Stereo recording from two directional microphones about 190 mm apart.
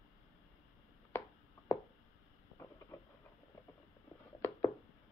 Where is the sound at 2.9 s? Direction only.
15° left (ahead or behind).